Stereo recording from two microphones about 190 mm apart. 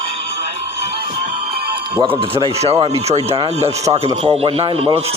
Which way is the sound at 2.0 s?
30° right (ahead or behind).